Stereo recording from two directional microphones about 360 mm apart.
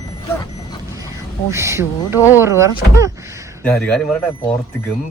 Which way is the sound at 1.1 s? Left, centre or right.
Centre.